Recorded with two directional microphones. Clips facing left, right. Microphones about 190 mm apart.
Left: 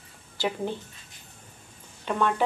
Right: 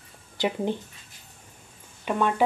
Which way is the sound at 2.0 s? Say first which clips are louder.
Right 1 dB; 15° right (ahead or behind).